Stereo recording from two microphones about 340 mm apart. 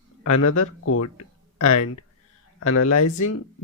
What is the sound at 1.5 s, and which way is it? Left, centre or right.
Speech, left.